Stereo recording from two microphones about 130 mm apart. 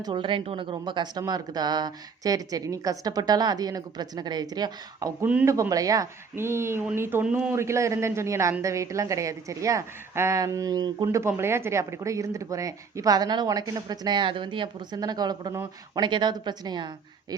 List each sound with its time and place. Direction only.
0.0 s a woman's voice: 40° right (ahead or behind)
5.2 s speech: 10° right (ahead or behind)
5.5 s a woman's voice: 25° right (ahead or behind); by 7.5 s 10° right (ahead or behind)
7.5 s a woman's voice: 20° right (ahead or behind)